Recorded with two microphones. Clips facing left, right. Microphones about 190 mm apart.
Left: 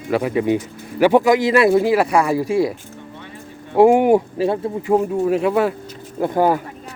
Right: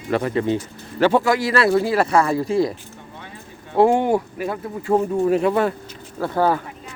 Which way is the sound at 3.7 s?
15° left (ahead or behind).